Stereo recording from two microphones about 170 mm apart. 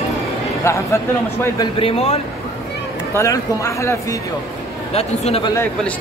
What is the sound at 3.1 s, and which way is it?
Speech, 20° left (ahead or behind).